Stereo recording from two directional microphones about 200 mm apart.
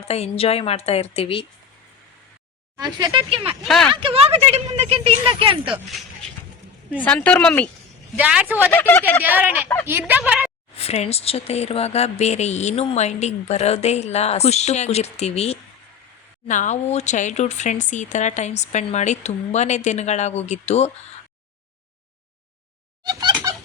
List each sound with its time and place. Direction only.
0.1 s a woman's voice: 30° left (ahead or behind)
2.7 s speech: 20° right (ahead or behind)
3.7 s speech: centre (ahead or behind)
3.9 s a woman's voice: 25° right (ahead or behind)
7.0 s speech: 5° left (ahead or behind)
8.1 s a woman's voice: 5° right (ahead or behind)
8.7 s speech: 10° left (ahead or behind)
9.2 s a woman's voice: 10° right (ahead or behind)
10.8 s speech: 30° left (ahead or behind)
23.0 s chicken: 20° right (ahead or behind)